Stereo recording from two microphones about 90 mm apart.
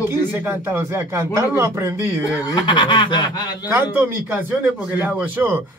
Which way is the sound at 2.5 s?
60° left (ahead or behind).